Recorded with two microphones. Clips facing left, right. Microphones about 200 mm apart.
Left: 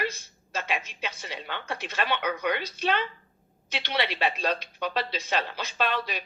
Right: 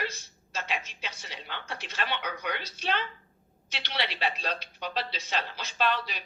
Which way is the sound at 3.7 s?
55° left (ahead or behind).